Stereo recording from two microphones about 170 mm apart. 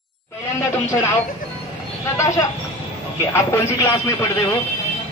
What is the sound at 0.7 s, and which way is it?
Speech, 15° left (ahead or behind).